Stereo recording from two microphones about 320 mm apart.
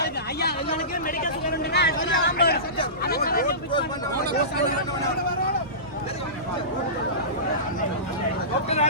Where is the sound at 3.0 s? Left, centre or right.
Left.